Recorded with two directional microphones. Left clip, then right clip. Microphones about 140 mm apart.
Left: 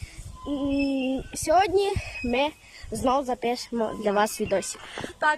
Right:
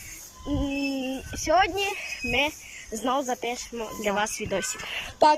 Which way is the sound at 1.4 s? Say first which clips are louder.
Left 1 dB; 25° left (ahead or behind).